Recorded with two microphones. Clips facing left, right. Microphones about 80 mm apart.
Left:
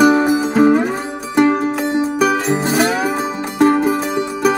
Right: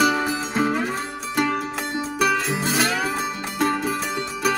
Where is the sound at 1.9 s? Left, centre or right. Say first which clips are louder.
Left 4 dB; centre.